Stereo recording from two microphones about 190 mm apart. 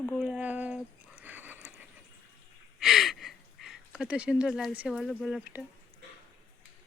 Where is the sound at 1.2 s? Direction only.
10° right (ahead or behind).